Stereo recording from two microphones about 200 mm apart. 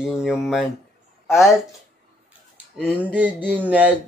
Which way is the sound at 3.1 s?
10° right (ahead or behind).